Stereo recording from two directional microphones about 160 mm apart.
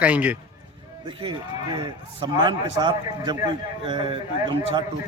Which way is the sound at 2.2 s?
30° right (ahead or behind).